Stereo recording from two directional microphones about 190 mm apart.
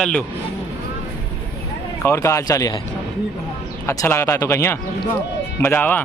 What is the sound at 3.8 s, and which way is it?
Speech, 15° left (ahead or behind).